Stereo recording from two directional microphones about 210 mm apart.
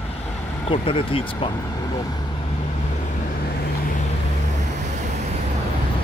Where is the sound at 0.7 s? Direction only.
25° left (ahead or behind).